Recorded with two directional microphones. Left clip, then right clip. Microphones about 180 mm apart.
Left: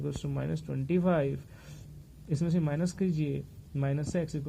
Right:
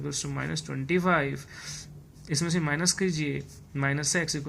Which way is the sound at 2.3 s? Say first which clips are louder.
Right 5 dB; 25° left (ahead or behind).